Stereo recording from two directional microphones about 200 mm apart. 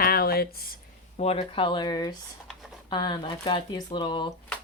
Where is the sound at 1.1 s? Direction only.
30° left (ahead or behind).